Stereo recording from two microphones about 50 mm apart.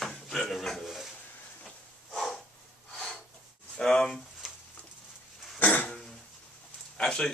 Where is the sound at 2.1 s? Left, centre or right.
Centre.